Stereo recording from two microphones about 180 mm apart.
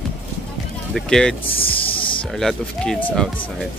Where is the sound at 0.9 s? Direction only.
5° left (ahead or behind).